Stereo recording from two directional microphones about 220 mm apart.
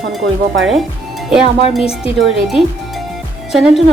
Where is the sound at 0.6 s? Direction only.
Centre (ahead or behind).